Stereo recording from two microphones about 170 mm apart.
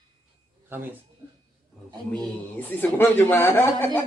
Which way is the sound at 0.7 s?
10° right (ahead or behind).